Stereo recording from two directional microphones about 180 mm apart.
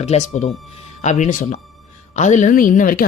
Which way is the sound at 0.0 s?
40° left (ahead or behind).